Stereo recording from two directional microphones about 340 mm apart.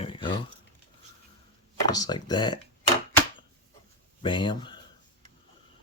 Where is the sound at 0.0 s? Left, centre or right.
Centre.